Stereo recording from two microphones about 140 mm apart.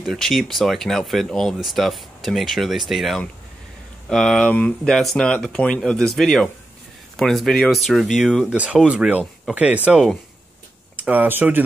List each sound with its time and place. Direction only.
0.0 s speech: centre (ahead or behind)